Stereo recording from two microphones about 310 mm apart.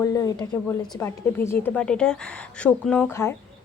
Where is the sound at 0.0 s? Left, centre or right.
Centre.